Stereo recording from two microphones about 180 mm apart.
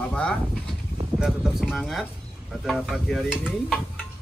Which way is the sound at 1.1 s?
5° right (ahead or behind).